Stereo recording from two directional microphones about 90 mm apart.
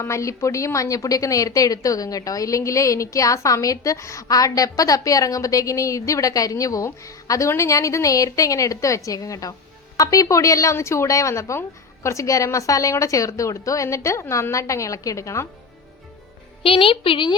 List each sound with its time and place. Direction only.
0.0 s a woman's voice: 35° left (ahead or behind)
16.6 s a woman's voice: 85° left; by 17.3 s 70° left (ahead or behind)